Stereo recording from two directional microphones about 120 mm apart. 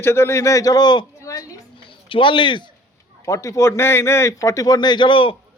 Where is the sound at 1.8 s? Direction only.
45° left (ahead or behind).